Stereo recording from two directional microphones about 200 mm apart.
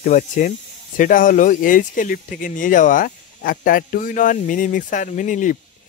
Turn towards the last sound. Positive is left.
turn(degrees=40)  # may be behind; listen again after turning